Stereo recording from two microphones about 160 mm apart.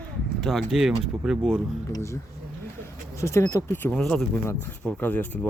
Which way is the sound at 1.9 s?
15° left (ahead or behind).